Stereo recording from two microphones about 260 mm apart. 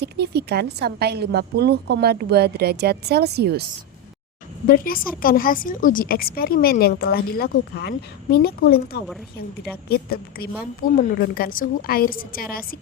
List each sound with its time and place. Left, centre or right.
0.0 s a woman's voice: right
4.6 s a woman's voice: left